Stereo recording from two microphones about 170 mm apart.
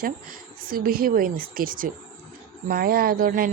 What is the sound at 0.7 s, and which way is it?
Speech, 60° right (ahead or behind).